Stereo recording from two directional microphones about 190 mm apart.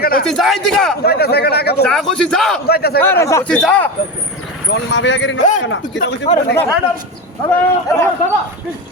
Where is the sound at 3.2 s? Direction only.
15° left (ahead or behind).